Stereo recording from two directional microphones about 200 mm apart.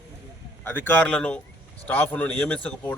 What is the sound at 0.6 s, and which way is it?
A man's voice, 10° left (ahead or behind).